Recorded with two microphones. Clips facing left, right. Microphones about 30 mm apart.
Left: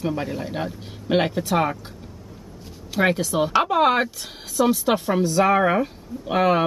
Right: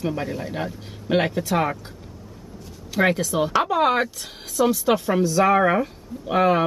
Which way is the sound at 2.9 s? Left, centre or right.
Centre.